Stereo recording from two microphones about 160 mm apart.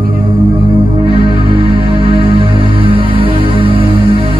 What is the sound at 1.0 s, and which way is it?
Music, 30° right (ahead or behind).